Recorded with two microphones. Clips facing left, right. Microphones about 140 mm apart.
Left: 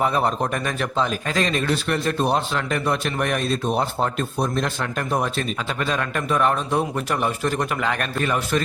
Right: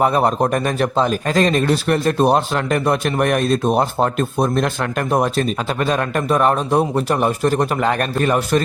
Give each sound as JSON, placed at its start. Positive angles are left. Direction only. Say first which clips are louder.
{"t": 0.0, "sound": "speech", "louder": "right 5 dB", "side_deg": -45}
{"t": 5.4, "sound": "a man's voice", "louder": "right 6 dB", "side_deg": -40}